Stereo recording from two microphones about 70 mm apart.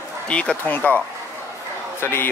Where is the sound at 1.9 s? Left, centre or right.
Left.